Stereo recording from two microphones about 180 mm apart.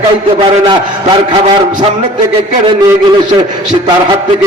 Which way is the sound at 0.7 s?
25° right (ahead or behind).